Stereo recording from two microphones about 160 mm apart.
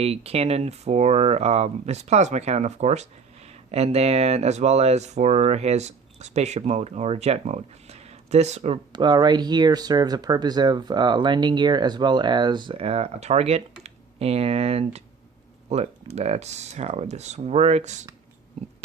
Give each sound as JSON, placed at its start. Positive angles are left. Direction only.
{"t": 0.0, "sound": "speech", "side_deg": -40}
{"t": 8.9, "sound": "speech", "side_deg": -30}